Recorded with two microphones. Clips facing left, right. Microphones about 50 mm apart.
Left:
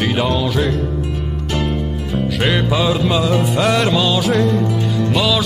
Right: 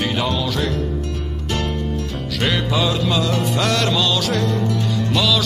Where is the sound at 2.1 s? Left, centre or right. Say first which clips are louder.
Left 6 dB; centre.